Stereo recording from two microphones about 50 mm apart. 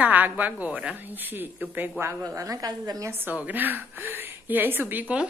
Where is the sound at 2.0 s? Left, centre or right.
Right.